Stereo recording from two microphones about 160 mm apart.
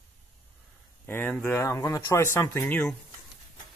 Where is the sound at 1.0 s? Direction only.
10° left (ahead or behind).